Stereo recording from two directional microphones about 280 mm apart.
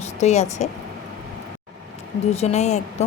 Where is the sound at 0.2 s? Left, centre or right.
Left.